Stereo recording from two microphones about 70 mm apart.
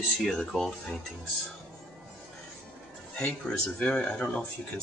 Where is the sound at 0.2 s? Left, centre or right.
Centre.